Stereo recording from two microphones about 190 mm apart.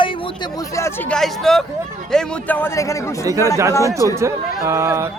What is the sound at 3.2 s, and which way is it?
Speech, 15° right (ahead or behind).